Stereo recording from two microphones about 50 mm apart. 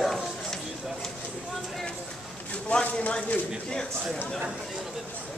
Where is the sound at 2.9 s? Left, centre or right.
Left.